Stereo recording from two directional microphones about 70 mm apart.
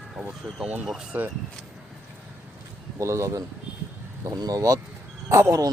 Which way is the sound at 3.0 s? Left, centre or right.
Right.